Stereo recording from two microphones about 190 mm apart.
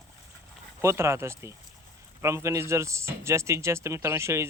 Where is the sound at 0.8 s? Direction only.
15° right (ahead or behind).